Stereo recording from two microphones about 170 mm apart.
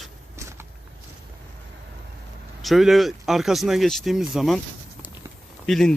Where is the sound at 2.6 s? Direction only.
Centre (ahead or behind).